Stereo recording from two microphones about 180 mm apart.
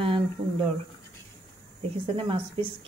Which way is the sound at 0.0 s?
30° right (ahead or behind).